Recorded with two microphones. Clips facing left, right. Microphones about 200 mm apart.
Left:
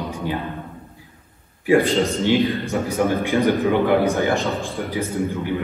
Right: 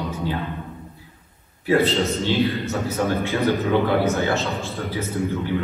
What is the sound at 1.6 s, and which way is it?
A man's voice, 15° left (ahead or behind).